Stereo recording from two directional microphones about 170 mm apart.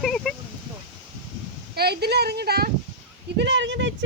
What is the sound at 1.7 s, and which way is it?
Speech, 70° right (ahead or behind).